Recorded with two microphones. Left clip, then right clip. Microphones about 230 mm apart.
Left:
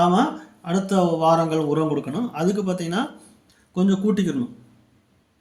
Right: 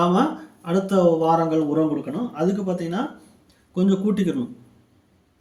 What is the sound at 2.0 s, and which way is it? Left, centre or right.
Music, left.